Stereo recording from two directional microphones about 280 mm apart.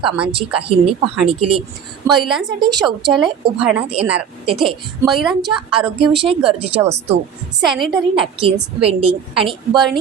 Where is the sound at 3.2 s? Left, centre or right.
Centre.